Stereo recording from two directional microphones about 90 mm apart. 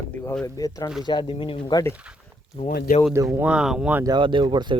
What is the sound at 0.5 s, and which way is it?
Speech, 40° left (ahead or behind).